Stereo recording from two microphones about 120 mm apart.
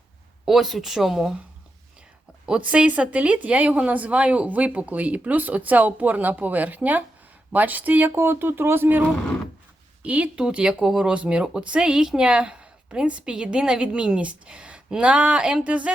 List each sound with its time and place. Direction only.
0.4 s a woman's voice: 5° right (ahead or behind)
2.7 s speech: 10° right (ahead or behind)